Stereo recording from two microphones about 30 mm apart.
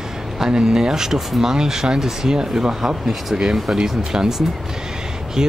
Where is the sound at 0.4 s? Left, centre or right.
Right.